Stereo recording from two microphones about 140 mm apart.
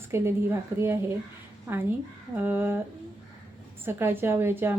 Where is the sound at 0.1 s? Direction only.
20° right (ahead or behind).